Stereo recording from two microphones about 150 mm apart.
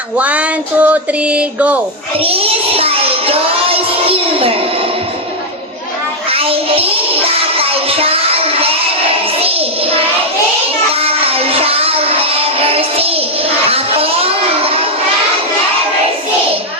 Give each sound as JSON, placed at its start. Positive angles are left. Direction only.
{"t": 0.2, "sound": "a sound", "side_deg": -10}
{"t": 2.2, "sound": "speech", "side_deg": -40}
{"t": 6.3, "sound": "music", "side_deg": -40}
{"t": 9.4, "sound": "child singing", "side_deg": -40}
{"t": 11.0, "sound": "music", "side_deg": -40}
{"t": 13.7, "sound": "a child's voice", "side_deg": -40}